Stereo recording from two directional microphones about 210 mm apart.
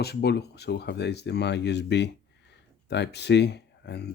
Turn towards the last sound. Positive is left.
turn(degrees=55)  # may be behind; listen again after turning